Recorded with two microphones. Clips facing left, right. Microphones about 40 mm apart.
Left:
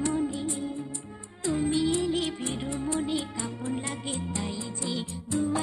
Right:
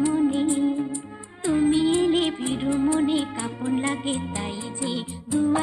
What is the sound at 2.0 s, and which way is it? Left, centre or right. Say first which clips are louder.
Music: right 7 dB; right.